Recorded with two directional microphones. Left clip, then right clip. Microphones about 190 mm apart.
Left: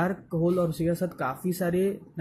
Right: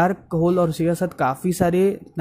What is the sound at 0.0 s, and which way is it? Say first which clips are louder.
Speech: right 8 dB; 50° right (ahead or behind).